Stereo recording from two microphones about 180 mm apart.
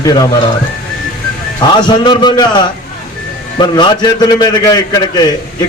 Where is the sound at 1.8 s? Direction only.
25° left (ahead or behind).